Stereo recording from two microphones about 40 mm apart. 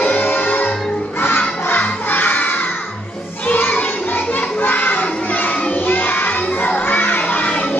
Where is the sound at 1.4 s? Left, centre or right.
Left.